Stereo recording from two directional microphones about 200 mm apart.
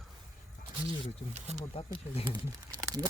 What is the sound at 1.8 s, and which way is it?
Speech, 25° left (ahead or behind).